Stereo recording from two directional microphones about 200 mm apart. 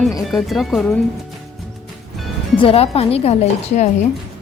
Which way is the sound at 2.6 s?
30° left (ahead or behind).